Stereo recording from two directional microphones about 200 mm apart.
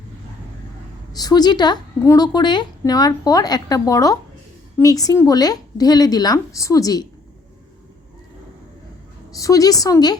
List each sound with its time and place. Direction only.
1.1 s a woman's voice: 20° left (ahead or behind)
9.3 s a woman's voice: 15° left (ahead or behind)